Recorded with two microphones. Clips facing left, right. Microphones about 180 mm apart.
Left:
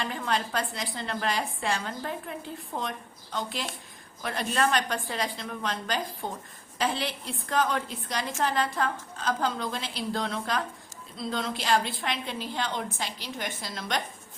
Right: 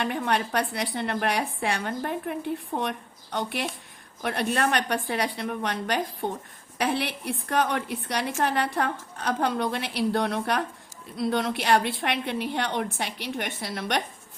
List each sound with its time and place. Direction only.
0.0 s a woman's voice: 65° right (ahead or behind)